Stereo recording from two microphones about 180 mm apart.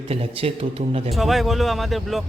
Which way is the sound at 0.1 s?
35° right (ahead or behind).